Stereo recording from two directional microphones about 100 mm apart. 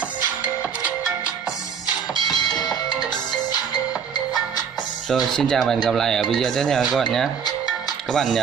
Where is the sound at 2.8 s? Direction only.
45° left (ahead or behind).